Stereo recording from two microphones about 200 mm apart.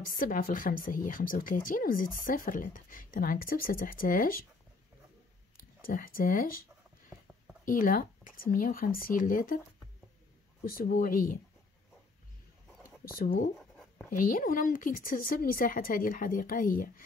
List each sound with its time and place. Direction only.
0.0 s speech: 45° left (ahead or behind)
5.8 s speech: 45° left (ahead or behind)
7.6 s speech: 45° left (ahead or behind)
10.6 s speech: 45° left (ahead or behind)
13.0 s speech: 45° left (ahead or behind)
13.6 s writing: centre (ahead or behind)
14.1 s speech: 45° left (ahead or behind)